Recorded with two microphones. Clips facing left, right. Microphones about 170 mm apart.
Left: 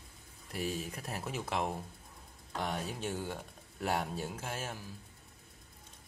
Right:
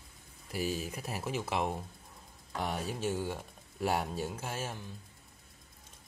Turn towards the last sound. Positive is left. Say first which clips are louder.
# right 2 dB
turn(degrees=0)  # may be behind; listen again after turning